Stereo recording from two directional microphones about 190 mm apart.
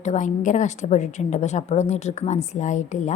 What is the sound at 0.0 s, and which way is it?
A woman's voice, 40° left (ahead or behind).